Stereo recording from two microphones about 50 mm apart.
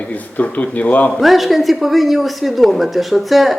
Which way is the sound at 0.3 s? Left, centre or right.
Left.